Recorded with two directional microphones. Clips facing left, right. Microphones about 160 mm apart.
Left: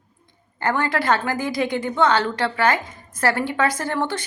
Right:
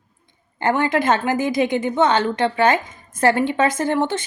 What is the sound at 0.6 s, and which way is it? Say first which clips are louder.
A woman's voice: right 4 dB; 20° right (ahead or behind).